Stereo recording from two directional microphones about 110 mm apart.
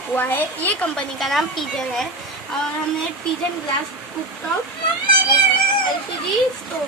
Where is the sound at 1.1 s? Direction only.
Centre (ahead or behind).